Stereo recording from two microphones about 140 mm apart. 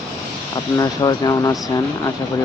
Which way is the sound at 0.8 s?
25° left (ahead or behind).